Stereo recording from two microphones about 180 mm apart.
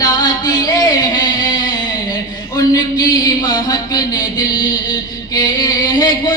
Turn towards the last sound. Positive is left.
turn(degrees=20)  # may be behind; listen again after turning